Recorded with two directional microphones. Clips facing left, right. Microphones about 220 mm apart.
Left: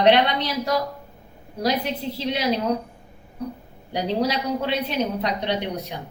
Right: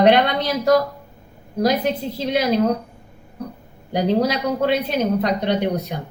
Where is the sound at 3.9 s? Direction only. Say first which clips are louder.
Right 4 dB; 45° right (ahead or behind).